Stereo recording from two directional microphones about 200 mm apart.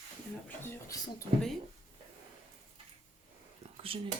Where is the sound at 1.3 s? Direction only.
30° right (ahead or behind).